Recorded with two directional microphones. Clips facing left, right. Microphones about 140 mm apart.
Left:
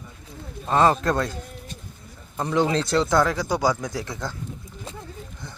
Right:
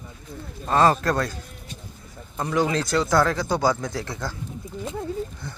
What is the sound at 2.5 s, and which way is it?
Speech, 30° left (ahead or behind).